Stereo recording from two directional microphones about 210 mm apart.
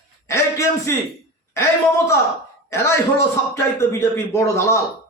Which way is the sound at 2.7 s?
15° left (ahead or behind).